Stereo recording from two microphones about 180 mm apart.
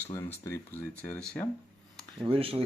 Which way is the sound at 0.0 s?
15° left (ahead or behind).